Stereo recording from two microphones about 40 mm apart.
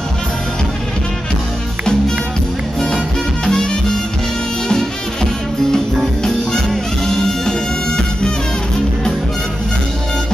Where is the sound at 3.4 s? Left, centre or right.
Centre.